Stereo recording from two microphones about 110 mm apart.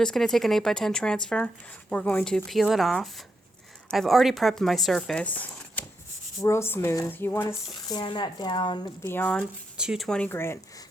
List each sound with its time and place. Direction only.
0.0 s speech: 5° left (ahead or behind)
7.9 s speech: 45° left (ahead or behind)
9.0 s speech: 20° left (ahead or behind)
9.7 s speech: 5° right (ahead or behind)
10.1 s speech: 10° left (ahead or behind)
10.3 s speech: 20° left (ahead or behind)